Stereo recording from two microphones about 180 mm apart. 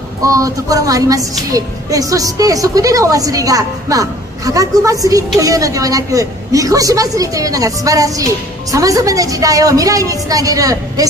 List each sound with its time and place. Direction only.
0.2 s speech: 20° right (ahead or behind)